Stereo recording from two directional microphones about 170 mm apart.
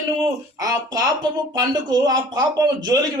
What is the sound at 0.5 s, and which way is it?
A man's voice, 20° right (ahead or behind).